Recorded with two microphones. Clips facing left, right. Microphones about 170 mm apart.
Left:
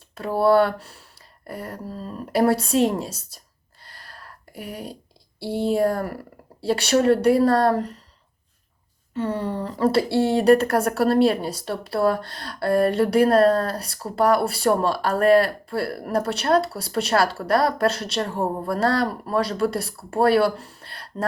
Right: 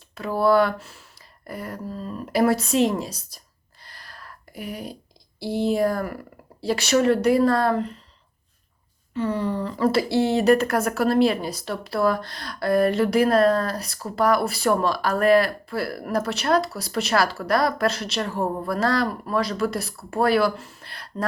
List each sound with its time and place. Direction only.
0.1 s a woman's voice: 30° left (ahead or behind)
3.8 s a sound: 30° left (ahead or behind)
5.5 s a woman's voice: 30° left (ahead or behind)
9.2 s a woman's voice: 30° left (ahead or behind)